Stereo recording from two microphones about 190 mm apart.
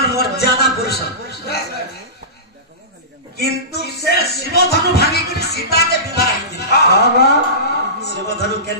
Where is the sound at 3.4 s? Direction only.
60° left (ahead or behind).